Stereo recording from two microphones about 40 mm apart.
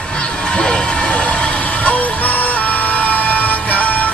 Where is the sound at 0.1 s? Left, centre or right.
Left.